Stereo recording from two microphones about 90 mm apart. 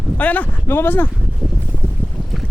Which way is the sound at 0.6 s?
25° left (ahead or behind).